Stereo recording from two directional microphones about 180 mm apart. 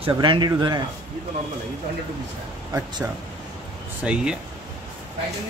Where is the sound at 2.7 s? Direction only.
15° right (ahead or behind).